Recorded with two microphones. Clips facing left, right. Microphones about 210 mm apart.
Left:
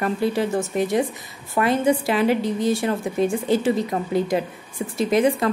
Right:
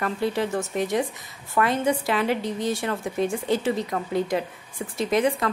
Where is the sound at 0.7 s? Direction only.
5° left (ahead or behind).